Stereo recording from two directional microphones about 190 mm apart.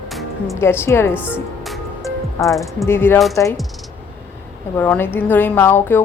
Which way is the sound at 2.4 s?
10° left (ahead or behind).